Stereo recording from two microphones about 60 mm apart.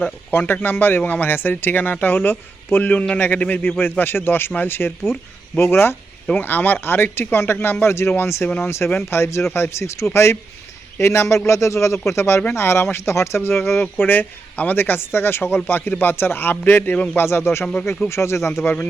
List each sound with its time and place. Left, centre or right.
0.0 s speech: left
6.3 s speech: left
14.0 s speech: left
17.2 s speech: left